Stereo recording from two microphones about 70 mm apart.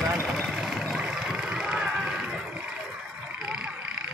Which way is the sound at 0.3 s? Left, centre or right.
Centre.